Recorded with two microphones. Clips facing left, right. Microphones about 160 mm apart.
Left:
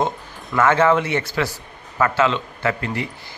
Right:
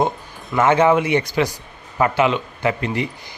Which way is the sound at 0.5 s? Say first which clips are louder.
Right 1 dB; 20° right (ahead or behind).